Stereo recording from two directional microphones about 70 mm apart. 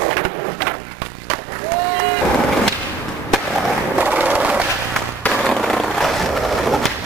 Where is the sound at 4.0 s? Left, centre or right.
Right.